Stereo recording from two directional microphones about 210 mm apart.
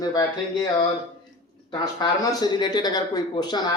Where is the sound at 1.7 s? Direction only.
20° left (ahead or behind).